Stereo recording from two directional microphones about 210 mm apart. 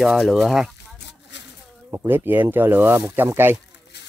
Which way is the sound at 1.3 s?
55° left (ahead or behind).